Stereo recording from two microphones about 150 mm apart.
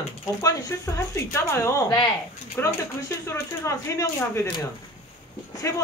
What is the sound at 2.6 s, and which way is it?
Speech, 15° left (ahead or behind).